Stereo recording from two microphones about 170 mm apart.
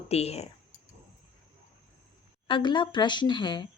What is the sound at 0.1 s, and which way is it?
Speech, 35° left (ahead or behind).